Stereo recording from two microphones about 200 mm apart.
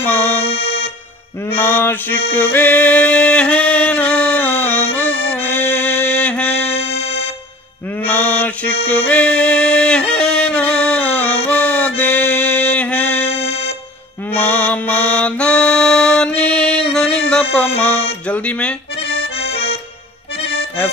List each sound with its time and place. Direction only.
0.0 s accordion: 10° left (ahead or behind)
0.5 s music: 55° left (ahead or behind)
1.6 s mantra: 10° left (ahead or behind)
2.3 s music: 10° left (ahead or behind)
6.7 s music: 30° left (ahead or behind)
8.1 s mantra: 10° left (ahead or behind)
8.8 s music: 10° left (ahead or behind)
13.3 s music: 30° left (ahead or behind)
14.3 s music: 10° left (ahead or behind)
19.3 s accordion: 30° left (ahead or behind)